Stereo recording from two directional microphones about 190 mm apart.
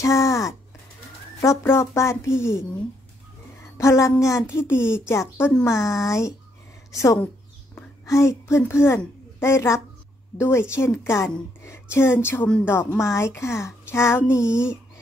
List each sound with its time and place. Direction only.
0.0 s a sound: 15° left (ahead or behind)
1.4 s a woman's voice: 15° left (ahead or behind)
3.7 s a woman's voice: 15° left (ahead or behind)
14.4 s speech: 5° right (ahead or behind)